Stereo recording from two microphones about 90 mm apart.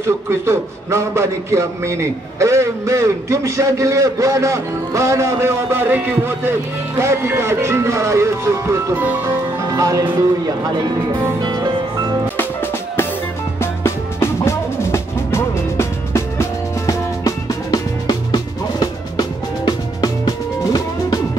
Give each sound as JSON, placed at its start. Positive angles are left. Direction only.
{"t": 0.0, "sound": "a man's voice", "side_deg": -30}
{"t": 8.9, "sound": "speech", "side_deg": -20}
{"t": 9.7, "sound": "a man's voice", "side_deg": -40}
{"t": 11.3, "sound": "music", "side_deg": -50}
{"t": 13.6, "sound": "music", "side_deg": 30}
{"t": 17.6, "sound": "music", "side_deg": 45}